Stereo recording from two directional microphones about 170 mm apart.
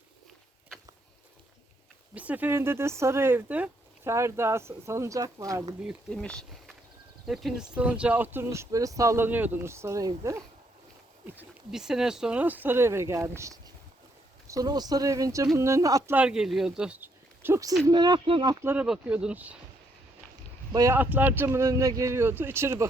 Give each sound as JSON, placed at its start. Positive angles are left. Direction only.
{"t": 2.1, "sound": "speech", "side_deg": -10}
{"t": 5.8, "sound": "speech", "side_deg": 0}
{"t": 11.3, "sound": "speech", "side_deg": -5}
{"t": 16.1, "sound": "speech", "side_deg": -5}
{"t": 18.6, "sound": "speech", "side_deg": -10}
{"t": 20.7, "sound": "speech", "side_deg": -15}